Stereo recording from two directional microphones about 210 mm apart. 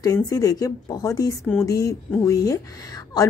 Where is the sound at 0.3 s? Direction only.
15° left (ahead or behind).